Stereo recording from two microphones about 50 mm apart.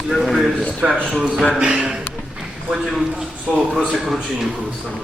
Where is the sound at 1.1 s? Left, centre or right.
Centre.